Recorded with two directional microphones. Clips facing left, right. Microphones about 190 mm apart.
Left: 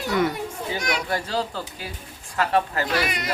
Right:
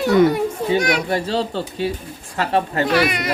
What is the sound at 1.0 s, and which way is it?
Speech, 25° right (ahead or behind).